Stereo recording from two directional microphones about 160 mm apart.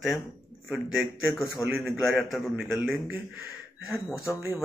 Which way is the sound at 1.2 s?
15° left (ahead or behind).